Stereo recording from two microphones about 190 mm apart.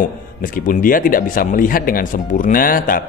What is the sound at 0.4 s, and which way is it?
Speech, 45° left (ahead or behind).